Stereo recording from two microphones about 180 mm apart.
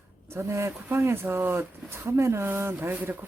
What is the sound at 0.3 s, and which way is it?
Speech, 15° right (ahead or behind).